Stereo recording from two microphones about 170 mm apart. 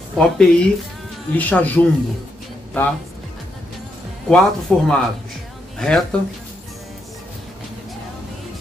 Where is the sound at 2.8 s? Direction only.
10° left (ahead or behind).